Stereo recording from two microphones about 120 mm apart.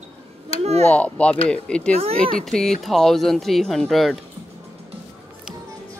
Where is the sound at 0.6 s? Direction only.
65° right (ahead or behind).